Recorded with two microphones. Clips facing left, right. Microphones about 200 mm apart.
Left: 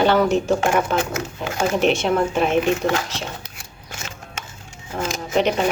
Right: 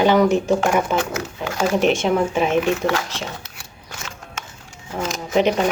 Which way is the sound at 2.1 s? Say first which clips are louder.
Right 1 dB; 10° right (ahead or behind).